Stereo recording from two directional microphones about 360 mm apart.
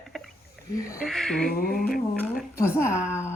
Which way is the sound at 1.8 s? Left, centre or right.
Centre.